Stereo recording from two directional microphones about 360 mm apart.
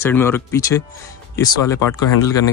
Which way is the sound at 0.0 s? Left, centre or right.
Centre.